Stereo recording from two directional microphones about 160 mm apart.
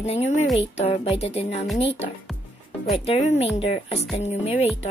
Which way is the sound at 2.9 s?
40° left (ahead or behind).